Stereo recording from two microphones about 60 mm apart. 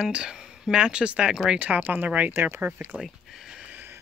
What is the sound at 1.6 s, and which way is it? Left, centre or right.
Speech, right.